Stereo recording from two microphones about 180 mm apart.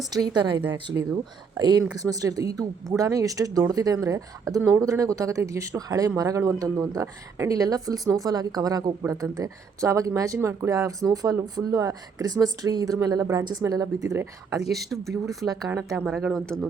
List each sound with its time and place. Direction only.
0.1 s speech: 25° right (ahead or behind)
14.7 s speech: centre (ahead or behind)